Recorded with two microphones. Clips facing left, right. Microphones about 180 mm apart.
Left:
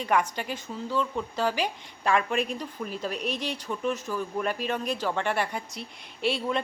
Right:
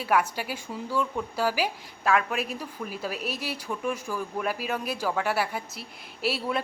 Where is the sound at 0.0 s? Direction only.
5° right (ahead or behind).